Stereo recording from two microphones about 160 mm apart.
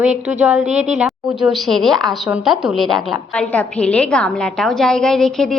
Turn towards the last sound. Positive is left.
turn(degrees=5)  # may be behind; listen again after turning